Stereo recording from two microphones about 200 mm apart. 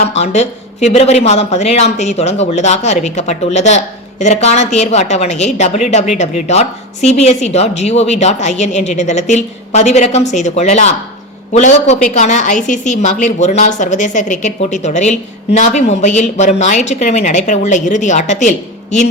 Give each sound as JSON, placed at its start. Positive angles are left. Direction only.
{"t": 0.0, "sound": "speech", "side_deg": 35}